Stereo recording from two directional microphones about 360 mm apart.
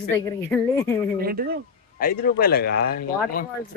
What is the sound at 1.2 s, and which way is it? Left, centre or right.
Speech, right.